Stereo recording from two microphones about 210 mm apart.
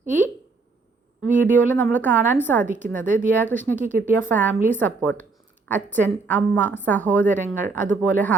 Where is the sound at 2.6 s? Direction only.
35° right (ahead or behind).